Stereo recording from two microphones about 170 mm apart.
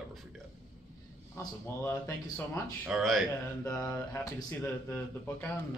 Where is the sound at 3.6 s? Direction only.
15° left (ahead or behind).